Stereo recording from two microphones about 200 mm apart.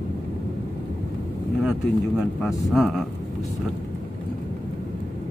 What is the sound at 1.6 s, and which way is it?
Speech, centre (ahead or behind).